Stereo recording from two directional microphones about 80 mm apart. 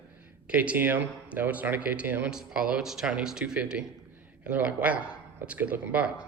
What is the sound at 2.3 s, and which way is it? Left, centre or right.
A man's voice, centre.